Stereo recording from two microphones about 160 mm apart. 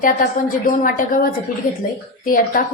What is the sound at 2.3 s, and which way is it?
Speech, 60° left (ahead or behind).